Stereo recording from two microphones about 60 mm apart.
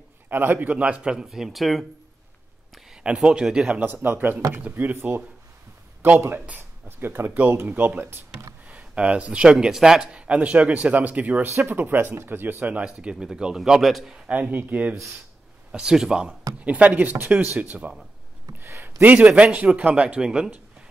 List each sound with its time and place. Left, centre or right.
0.3 s a man's voice: right
1.1 s speech: centre
3.0 s speech: centre
3.8 s a man's voice: right
4.9 s speech: right
8.6 s speech: right
10.1 s a man's voice: right
11.4 s speech: right; by 13.6 s centre
13.6 s speech: centre
14.1 s a man's voice: right
15.7 s speech: centre
16.6 s a man's voice: right
18.5 s a sound: right
19.0 s a man's voice: right